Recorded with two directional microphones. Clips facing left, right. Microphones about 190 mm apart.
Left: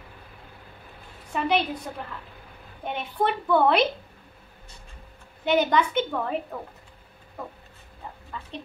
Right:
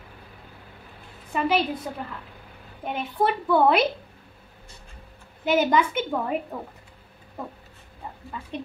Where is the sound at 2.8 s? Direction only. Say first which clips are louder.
Right 2 dB; 5° right (ahead or behind).